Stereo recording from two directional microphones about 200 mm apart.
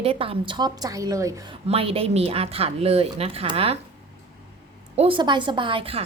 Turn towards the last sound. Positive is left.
turn(degrees=-25)  # may be behind; listen again after turning